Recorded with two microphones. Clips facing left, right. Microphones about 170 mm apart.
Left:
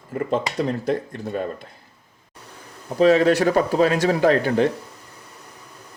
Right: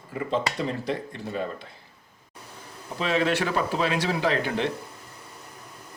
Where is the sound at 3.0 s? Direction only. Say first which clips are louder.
Left 9 dB; 40° left (ahead or behind).